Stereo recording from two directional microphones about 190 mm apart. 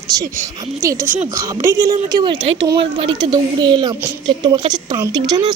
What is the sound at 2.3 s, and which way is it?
Speech, 75° right (ahead or behind).